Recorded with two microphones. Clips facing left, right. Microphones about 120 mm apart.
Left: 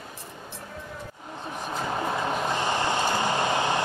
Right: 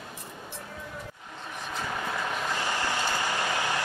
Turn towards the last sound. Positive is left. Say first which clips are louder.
# left 5 dB
turn(degrees=20)  # may be behind; listen again after turning